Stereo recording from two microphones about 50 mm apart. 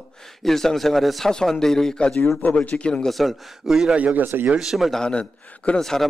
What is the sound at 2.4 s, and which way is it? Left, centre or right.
Speech, left.